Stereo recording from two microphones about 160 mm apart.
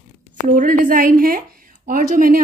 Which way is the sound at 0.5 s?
60° right (ahead or behind).